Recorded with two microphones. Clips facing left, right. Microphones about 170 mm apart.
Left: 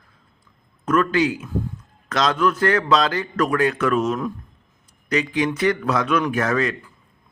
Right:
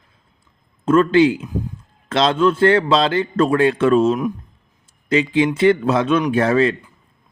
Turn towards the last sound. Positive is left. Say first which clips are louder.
# right 5 dB
turn(degrees=-30)  # may be behind; listen again after turning